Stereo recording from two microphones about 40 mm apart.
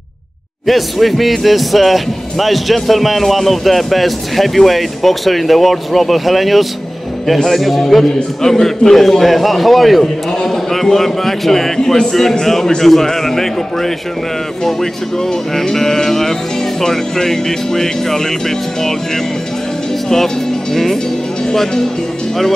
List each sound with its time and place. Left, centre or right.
0.7 s a man's voice: centre
20.7 s a man's voice: centre